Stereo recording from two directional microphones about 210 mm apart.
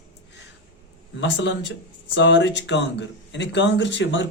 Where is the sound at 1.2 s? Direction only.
60° left (ahead or behind).